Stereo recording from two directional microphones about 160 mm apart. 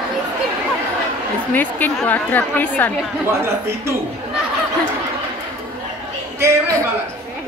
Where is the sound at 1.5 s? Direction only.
10° left (ahead or behind).